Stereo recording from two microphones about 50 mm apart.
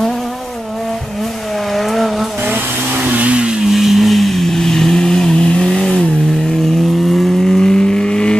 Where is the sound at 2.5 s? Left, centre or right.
Right.